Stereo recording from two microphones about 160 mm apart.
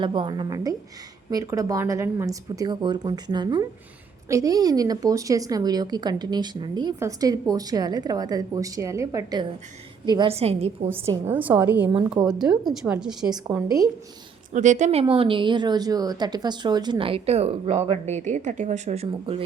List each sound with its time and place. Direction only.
0.0 s a woman's voice: 30° right (ahead or behind)
10.3 s a woman's voice: 40° right (ahead or behind)
11.0 s a woman's voice: 15° right (ahead or behind)
13.5 s a woman's voice: 20° right (ahead or behind)
14.5 s a woman's voice: 50° right (ahead or behind)